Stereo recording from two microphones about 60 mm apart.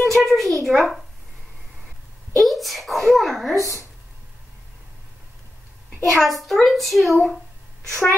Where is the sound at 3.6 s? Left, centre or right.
Right.